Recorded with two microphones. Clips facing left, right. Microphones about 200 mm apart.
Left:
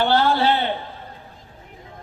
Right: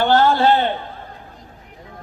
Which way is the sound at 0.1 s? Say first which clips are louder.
Right 4 dB; 45° right (ahead or behind).